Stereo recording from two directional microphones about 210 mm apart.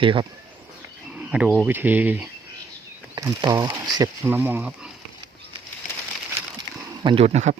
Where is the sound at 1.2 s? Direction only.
5° right (ahead or behind).